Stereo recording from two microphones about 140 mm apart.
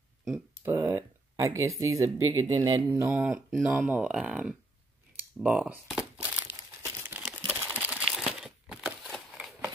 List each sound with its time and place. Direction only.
0.7 s a sound: 20° right (ahead or behind)
2.2 s speech: 25° right (ahead or behind)
2.9 s speech: 15° right (ahead or behind)
5.4 s crumpling: 10° right (ahead or behind)